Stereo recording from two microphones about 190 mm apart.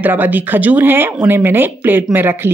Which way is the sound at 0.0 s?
10° right (ahead or behind).